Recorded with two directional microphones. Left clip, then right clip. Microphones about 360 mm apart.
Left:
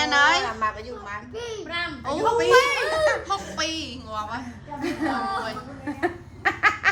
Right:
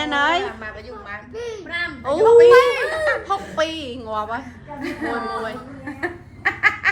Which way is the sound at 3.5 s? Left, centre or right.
Centre.